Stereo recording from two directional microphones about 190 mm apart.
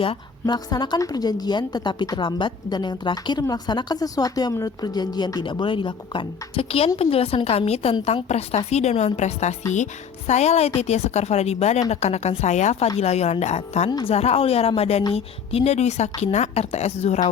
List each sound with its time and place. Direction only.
0.0 s a woman's voice: 25° left (ahead or behind)